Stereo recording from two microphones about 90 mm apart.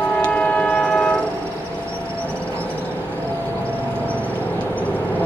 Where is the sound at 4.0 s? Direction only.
15° left (ahead or behind).